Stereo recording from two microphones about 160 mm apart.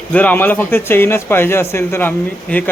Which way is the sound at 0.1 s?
10° left (ahead or behind).